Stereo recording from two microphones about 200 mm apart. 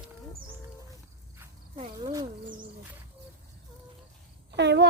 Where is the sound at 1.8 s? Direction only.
20° right (ahead or behind).